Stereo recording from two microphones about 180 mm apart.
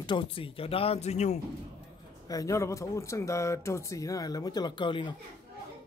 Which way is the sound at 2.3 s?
20° left (ahead or behind).